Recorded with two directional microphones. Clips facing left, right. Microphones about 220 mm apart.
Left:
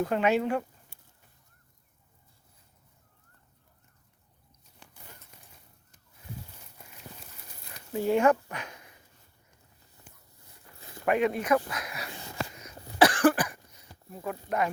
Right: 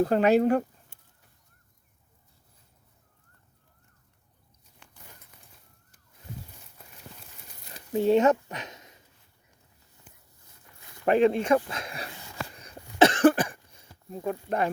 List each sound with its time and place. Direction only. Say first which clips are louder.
0.0 s speech: right 5 dB; 35° right (ahead or behind)
7.9 s speech: right 3 dB; 20° right (ahead or behind)
11.0 s speech: right 5 dB; 30° right (ahead or behind)
12.5 s cough: right 2 dB; 30° right (ahead or behind)